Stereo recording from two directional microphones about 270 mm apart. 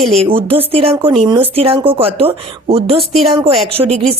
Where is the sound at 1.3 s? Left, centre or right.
Centre.